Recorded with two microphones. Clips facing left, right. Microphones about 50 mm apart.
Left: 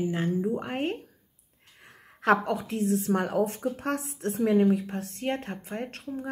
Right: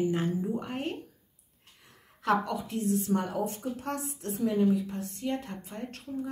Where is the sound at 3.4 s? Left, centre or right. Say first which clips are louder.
Left 5 dB; left.